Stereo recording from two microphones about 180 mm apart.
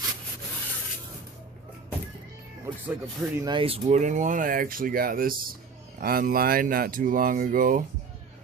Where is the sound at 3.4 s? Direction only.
25° right (ahead or behind); by 7.8 s 50° right (ahead or behind).